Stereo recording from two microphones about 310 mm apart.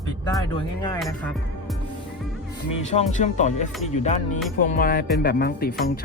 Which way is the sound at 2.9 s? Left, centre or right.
Left.